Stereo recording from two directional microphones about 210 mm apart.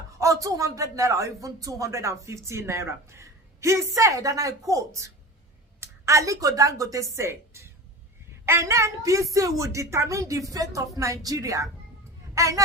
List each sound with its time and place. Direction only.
0.1 s a woman's voice: 15° right (ahead or behind)